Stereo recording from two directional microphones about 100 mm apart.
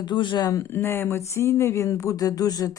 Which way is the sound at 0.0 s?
50° left (ahead or behind).